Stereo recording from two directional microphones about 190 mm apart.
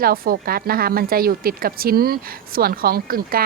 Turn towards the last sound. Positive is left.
turn(degrees=-50)  # may be behind; listen again after turning